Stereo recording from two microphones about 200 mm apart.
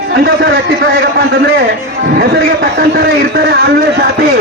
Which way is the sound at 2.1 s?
50° right (ahead or behind).